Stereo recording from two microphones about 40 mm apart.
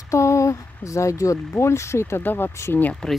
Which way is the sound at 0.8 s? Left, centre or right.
Left.